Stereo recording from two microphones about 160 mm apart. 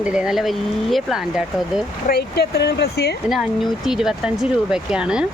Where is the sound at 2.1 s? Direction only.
80° left.